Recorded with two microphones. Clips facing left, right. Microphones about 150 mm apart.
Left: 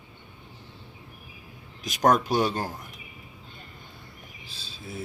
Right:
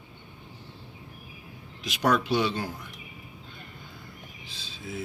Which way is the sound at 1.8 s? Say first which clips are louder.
Left 3 dB; 40° left (ahead or behind).